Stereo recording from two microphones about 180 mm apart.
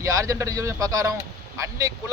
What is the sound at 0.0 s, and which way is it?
A man's voice, 20° right (ahead or behind).